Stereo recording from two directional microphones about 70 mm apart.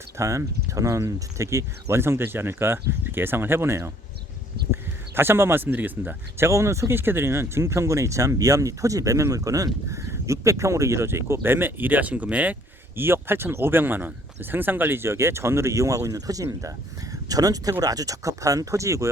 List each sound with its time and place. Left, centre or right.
0.2 s speech: right
13.0 s speech: right